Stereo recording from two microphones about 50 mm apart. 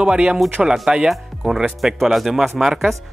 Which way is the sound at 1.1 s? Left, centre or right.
Centre.